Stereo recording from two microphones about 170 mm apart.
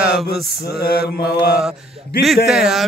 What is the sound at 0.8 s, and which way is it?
Mantra, 65° left (ahead or behind).